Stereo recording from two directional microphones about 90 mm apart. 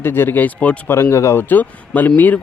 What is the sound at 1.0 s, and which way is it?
Speech, 30° left (ahead or behind).